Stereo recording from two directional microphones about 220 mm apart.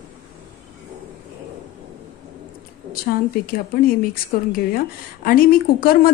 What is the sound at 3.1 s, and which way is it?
A woman's voice, 40° left (ahead or behind).